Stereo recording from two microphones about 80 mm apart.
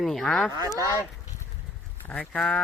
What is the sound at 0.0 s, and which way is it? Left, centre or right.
Speech, centre.